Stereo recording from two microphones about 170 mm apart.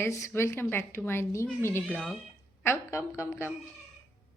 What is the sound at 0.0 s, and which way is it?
A woman's voice, 15° left (ahead or behind).